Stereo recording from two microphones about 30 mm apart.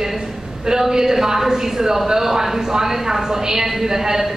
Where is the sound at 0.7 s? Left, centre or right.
Centre.